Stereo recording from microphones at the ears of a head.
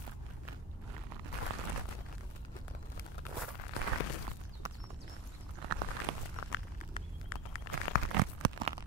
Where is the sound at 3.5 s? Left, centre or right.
Left.